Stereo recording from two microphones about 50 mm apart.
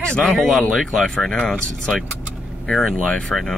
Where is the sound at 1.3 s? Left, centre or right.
Centre.